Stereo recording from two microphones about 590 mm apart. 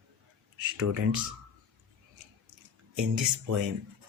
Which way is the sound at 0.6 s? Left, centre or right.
Right.